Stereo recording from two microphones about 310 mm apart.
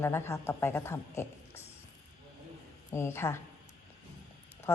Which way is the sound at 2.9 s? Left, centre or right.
Centre.